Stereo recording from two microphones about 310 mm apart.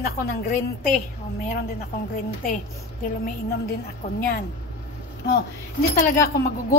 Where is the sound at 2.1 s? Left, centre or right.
Left.